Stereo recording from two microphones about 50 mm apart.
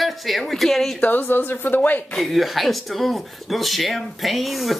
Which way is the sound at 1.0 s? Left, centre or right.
Left.